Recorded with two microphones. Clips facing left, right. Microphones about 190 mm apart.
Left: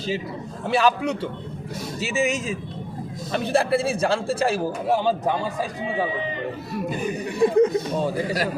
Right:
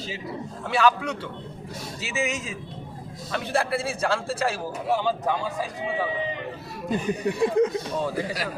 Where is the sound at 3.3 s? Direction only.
25° left (ahead or behind).